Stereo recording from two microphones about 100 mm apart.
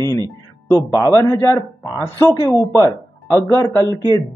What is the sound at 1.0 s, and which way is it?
Speech, 35° left (ahead or behind).